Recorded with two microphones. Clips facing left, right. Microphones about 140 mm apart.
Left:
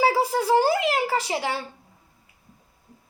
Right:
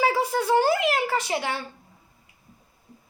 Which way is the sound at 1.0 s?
30° left (ahead or behind).